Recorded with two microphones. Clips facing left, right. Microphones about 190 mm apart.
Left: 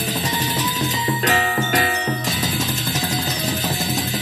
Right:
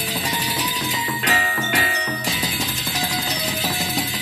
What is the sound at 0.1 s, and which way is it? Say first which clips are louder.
Music: left 2 dB; 45° left (ahead or behind).